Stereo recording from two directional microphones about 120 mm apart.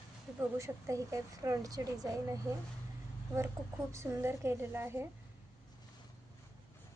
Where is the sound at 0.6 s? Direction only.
25° right (ahead or behind).